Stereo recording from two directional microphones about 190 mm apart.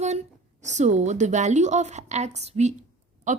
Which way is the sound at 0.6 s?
40° right (ahead or behind).